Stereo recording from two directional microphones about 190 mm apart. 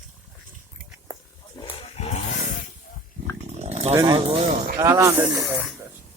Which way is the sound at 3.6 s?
35° right (ahead or behind).